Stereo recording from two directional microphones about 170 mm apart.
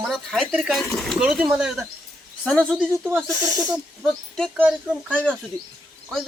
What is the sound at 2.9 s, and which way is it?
Speech, 15° right (ahead or behind).